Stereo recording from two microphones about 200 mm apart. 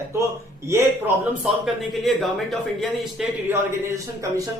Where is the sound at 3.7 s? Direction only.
15° right (ahead or behind).